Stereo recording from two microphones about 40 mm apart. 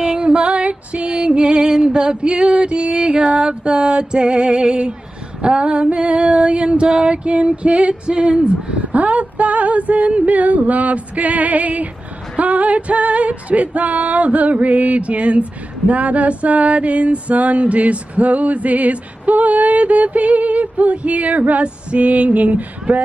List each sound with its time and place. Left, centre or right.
0.0 s female singing: right
8.9 s female singing: right